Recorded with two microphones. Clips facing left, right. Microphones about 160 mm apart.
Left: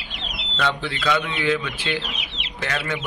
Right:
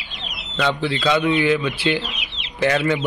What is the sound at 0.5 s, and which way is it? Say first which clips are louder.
Speech: right 4 dB; 10° right (ahead or behind).